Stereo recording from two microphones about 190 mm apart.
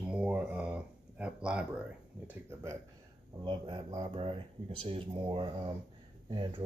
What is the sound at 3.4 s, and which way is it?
Speech, 25° right (ahead or behind).